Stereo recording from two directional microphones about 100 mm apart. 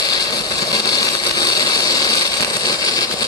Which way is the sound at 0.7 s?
40° left (ahead or behind).